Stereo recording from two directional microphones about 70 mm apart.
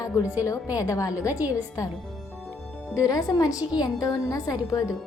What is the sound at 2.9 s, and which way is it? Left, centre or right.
A woman's voice, left.